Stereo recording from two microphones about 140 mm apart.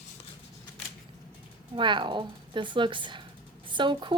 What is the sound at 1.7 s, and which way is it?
A woman's voice, 35° right (ahead or behind).